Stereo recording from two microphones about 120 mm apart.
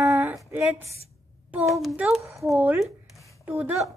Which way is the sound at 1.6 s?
Centre (ahead or behind).